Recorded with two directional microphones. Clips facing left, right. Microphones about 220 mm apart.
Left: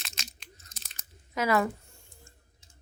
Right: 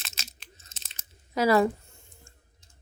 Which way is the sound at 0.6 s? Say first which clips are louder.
Left 1 dB; 25° right (ahead or behind).